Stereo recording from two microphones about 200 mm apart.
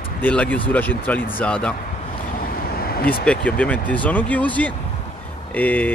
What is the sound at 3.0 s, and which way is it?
Speech, 5° left (ahead or behind).